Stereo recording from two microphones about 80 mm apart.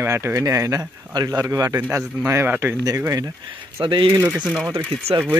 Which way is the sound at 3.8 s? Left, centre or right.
Right.